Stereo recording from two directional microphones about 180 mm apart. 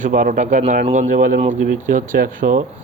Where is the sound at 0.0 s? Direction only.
50° right (ahead or behind).